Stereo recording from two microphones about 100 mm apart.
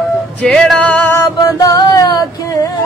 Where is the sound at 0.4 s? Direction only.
5° left (ahead or behind).